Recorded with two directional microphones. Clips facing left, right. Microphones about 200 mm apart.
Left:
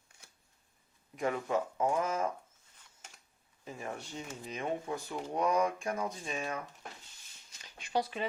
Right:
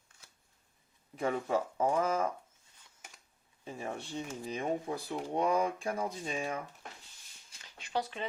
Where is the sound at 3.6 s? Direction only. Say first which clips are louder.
Right 2 dB; 30° right (ahead or behind).